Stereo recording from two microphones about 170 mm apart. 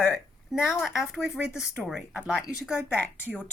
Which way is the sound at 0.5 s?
15° left (ahead or behind).